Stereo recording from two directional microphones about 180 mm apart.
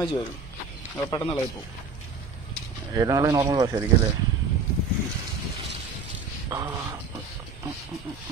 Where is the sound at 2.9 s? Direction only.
20° right (ahead or behind).